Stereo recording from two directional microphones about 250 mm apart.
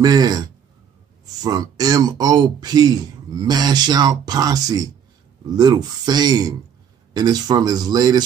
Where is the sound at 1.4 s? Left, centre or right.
Centre.